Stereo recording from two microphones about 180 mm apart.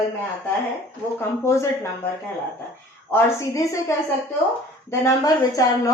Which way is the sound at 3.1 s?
15° left (ahead or behind).